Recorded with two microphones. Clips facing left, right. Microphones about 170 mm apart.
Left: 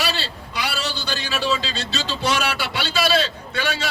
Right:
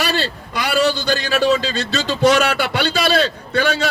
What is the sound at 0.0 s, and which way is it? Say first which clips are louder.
A man's voice: right 5 dB; 50° right (ahead or behind).